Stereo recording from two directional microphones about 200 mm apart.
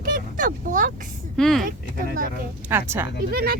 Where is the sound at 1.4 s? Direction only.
Centre (ahead or behind).